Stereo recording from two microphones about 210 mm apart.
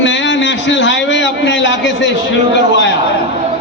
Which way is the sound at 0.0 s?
60° left (ahead or behind).